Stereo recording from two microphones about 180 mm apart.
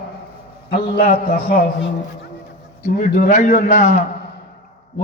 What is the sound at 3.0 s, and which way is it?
A man's voice, 45° left (ahead or behind).